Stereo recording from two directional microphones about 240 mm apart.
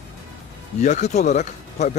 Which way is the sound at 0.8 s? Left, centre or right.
Left.